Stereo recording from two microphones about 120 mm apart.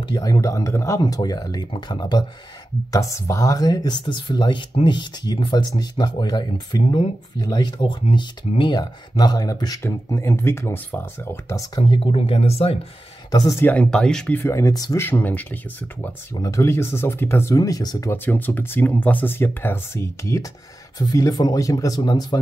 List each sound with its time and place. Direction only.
0.0 s speech: 35° left (ahead or behind)
11.8 s speech: 50° left (ahead or behind)
13.3 s speech: 30° left (ahead or behind)
13.6 s speech: 10° left (ahead or behind); by 15.0 s 30° left (ahead or behind)
15.0 s speech: 20° left (ahead or behind)
16.3 s speech: 25° left (ahead or behind)
17.6 s speech: 30° left (ahead or behind)
18.1 s speech: 15° left (ahead or behind); by 22.4 s 35° left (ahead or behind)